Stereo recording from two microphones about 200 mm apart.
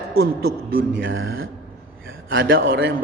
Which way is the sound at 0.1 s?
50° right (ahead or behind).